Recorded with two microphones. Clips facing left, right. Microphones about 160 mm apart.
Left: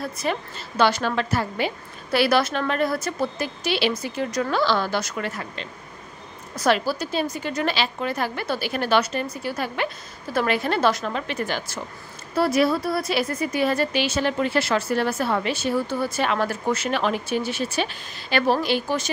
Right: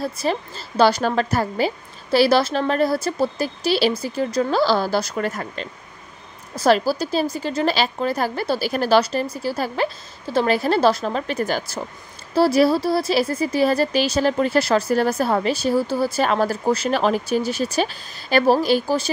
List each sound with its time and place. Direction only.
0.0 s a woman's voice: 30° right (ahead or behind)
2.0 s a woman's voice: 30° right (ahead or behind)
6.5 s a woman's voice: 35° right (ahead or behind)